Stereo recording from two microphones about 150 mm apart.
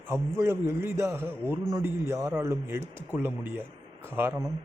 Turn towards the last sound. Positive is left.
turn(degrees=-15)  # may be behind; listen again after turning